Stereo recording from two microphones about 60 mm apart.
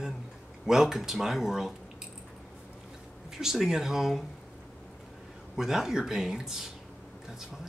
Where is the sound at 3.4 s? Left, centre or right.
Centre.